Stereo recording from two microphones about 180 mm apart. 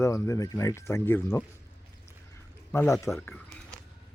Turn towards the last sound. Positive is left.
turn(degrees=10)  # may be behind; listen again after turning